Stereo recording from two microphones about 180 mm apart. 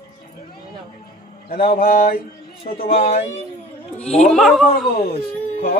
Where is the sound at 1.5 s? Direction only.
55° left (ahead or behind).